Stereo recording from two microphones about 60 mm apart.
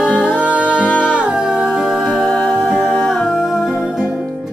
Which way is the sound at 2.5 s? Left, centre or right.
Centre.